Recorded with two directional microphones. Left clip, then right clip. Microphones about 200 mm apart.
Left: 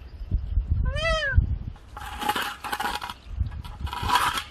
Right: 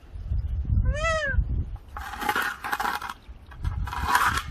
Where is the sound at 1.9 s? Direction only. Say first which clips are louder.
Right 1 dB; 15° right (ahead or behind).